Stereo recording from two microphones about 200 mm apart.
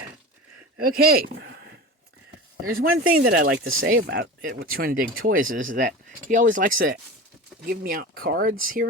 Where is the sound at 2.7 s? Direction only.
45° right (ahead or behind).